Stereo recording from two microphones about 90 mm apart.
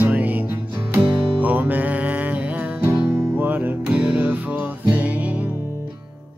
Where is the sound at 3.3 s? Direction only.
20° right (ahead or behind).